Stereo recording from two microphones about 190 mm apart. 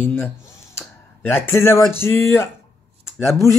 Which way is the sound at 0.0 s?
10° left (ahead or behind).